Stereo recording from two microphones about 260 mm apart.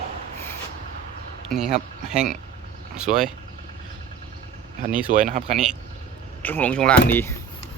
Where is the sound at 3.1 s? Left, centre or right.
Right.